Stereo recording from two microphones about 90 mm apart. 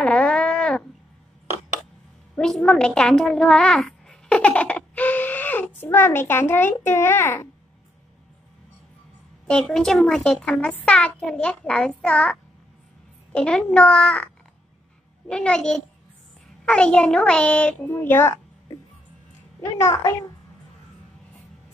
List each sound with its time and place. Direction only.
0.0 s a sound: 10° left (ahead or behind)
2.3 s a woman's voice: 5° left (ahead or behind); by 7.4 s 25° left (ahead or behind)
9.5 s a child's voice: 5° left (ahead or behind)
17.9 s a child's voice: 30° left (ahead or behind)
19.6 s a child's voice: 35° left (ahead or behind)